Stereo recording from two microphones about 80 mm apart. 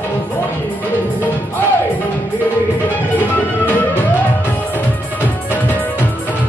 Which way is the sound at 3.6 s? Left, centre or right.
Left.